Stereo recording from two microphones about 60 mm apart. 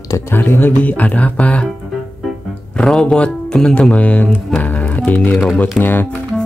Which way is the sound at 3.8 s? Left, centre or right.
Centre.